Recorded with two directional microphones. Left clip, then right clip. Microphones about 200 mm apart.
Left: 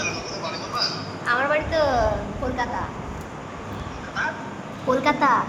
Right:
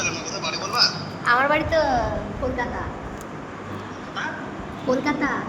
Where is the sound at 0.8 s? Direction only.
55° right (ahead or behind).